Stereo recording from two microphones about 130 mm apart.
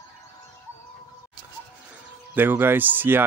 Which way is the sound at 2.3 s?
15° right (ahead or behind).